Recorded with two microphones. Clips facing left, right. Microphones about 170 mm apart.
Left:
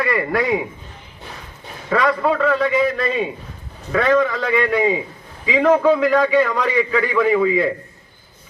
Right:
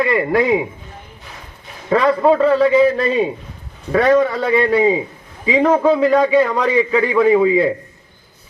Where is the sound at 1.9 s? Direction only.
30° right (ahead or behind).